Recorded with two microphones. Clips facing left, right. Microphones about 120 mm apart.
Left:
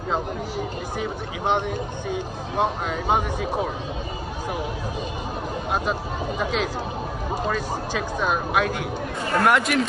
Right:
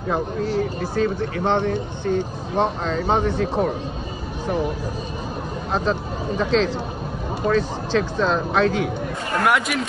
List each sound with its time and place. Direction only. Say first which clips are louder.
0.1 s speech: right 5 dB; 15° left (ahead or behind)
5.7 s speech: right 4 dB; 10° left (ahead or behind)
9.4 s speech: even; centre (ahead or behind)